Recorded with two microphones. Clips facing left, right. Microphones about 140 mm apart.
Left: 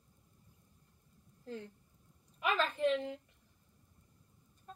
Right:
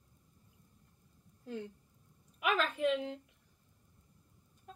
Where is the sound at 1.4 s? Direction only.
15° right (ahead or behind).